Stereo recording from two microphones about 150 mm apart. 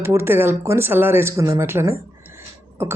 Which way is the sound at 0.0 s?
15° right (ahead or behind).